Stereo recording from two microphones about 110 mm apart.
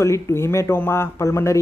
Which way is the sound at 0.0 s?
25° left (ahead or behind).